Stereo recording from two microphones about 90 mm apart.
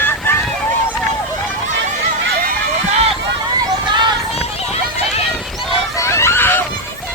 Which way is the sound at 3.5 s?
55° right (ahead or behind).